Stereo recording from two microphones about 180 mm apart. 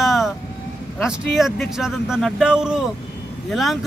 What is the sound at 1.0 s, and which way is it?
Speech, centre (ahead or behind).